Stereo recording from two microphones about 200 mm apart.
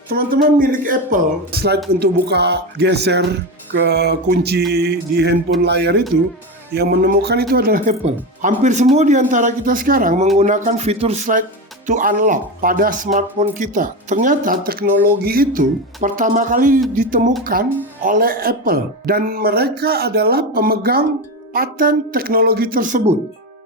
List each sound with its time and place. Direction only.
0.1 s speech: 50° right (ahead or behind)